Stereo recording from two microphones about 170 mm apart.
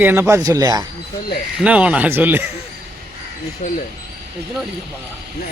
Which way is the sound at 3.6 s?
45° left (ahead or behind).